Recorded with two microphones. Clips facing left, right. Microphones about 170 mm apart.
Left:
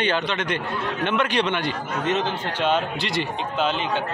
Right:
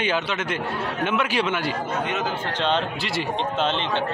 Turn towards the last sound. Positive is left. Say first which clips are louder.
# even
turn(degrees=0)  # may be behind; listen again after turning